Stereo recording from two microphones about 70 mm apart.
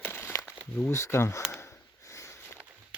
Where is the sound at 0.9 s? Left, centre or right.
Left.